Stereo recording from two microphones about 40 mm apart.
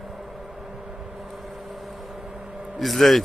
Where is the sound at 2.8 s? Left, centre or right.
Centre.